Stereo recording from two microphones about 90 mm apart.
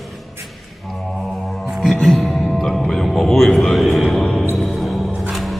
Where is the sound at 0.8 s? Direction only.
Centre (ahead or behind).